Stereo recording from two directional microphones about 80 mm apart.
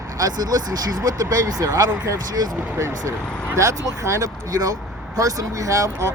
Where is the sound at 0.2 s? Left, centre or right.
Right.